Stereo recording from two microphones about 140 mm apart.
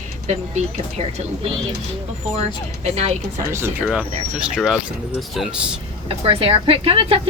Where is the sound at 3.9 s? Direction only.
5° right (ahead or behind).